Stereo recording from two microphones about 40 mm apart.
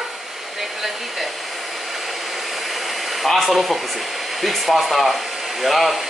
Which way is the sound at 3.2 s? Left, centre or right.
Centre.